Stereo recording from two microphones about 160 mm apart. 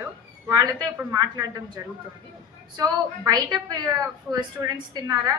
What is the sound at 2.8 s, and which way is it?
A woman's voice, 25° right (ahead or behind).